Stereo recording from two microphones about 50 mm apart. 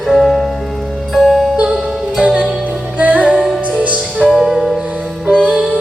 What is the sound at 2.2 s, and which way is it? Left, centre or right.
Music, right.